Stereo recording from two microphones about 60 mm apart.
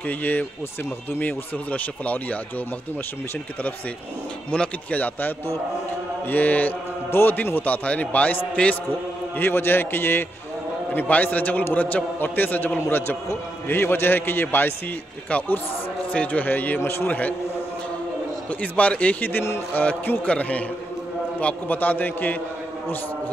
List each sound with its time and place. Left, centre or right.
0.0 s a man's voice: left
4.5 s speech: centre
4.9 s a man's voice: left
9.4 s a man's voice: left
16.1 s a man's voice: left
18.5 s a man's voice: left